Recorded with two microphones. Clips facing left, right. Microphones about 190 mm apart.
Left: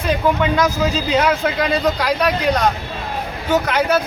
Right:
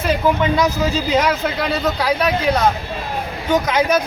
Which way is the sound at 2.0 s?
5° right (ahead or behind).